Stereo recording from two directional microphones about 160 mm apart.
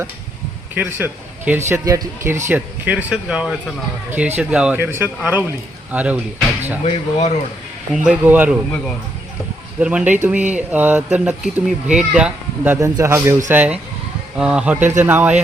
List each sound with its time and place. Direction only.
0.7 s speech: 10° right (ahead or behind)
6.8 s speech: 40° left (ahead or behind)
8.0 s speech: 10° right (ahead or behind)
9.8 s speech: 5° right (ahead or behind)